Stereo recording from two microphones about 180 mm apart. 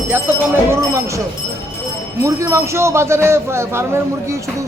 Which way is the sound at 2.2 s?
15° right (ahead or behind).